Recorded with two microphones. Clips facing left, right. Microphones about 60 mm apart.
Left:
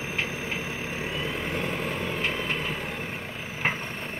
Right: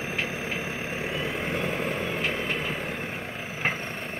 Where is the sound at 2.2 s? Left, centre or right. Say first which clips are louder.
Even; centre.